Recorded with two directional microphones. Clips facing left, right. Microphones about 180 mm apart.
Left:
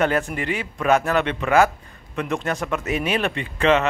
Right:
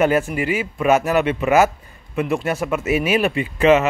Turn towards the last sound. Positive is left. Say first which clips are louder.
# right 4 dB
turn(degrees=-5)  # may be behind; listen again after turning